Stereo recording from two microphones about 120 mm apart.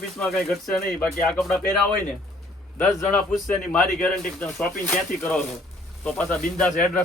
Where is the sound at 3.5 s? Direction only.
10° left (ahead or behind).